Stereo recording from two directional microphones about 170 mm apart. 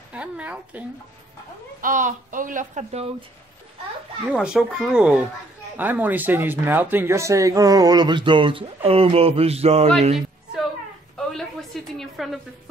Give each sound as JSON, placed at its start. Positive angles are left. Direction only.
{"t": 0.1, "sound": "speech", "side_deg": -10}
{"t": 1.8, "sound": "speech", "side_deg": -50}
{"t": 4.3, "sound": "a child's voice", "side_deg": -5}
{"t": 11.1, "sound": "a sound", "side_deg": 0}